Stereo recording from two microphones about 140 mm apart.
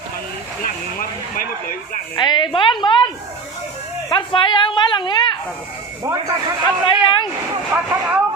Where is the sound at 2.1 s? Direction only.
30° left (ahead or behind).